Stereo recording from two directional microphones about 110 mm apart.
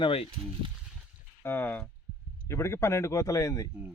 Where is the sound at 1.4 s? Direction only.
15° left (ahead or behind).